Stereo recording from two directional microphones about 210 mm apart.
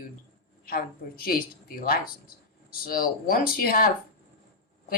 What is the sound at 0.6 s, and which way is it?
Speech, 45° left (ahead or behind).